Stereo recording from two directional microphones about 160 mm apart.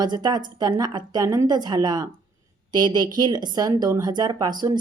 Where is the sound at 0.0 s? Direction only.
25° right (ahead or behind).